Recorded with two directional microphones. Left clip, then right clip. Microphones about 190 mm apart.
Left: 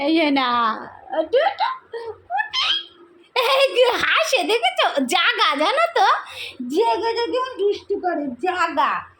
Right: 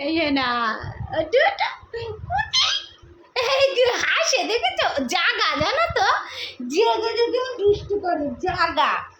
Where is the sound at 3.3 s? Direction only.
40° left (ahead or behind).